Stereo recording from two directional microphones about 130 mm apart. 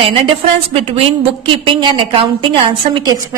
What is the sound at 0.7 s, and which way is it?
A woman's voice, 45° right (ahead or behind).